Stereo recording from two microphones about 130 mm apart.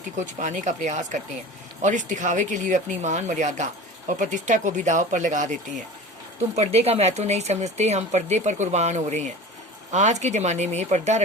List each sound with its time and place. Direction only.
0.2 s a woman's voice: 70° right (ahead or behind)
6.6 s speech: 50° right (ahead or behind)